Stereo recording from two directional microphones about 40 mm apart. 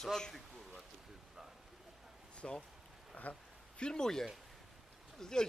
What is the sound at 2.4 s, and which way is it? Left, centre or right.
Speech, centre.